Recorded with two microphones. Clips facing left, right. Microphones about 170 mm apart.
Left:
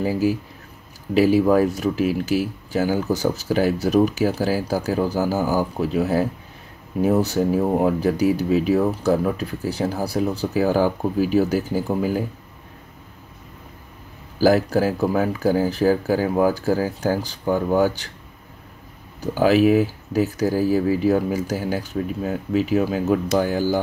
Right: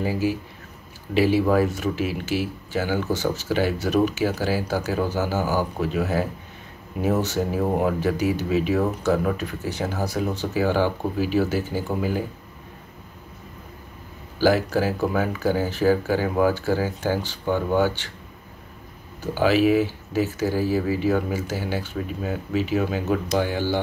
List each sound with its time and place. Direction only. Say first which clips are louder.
0.0 s speech: left 3 dB; 40° left (ahead or behind)
14.4 s speech: left 3 dB; 40° left (ahead or behind)
19.3 s speech: left 3 dB; 40° left (ahead or behind)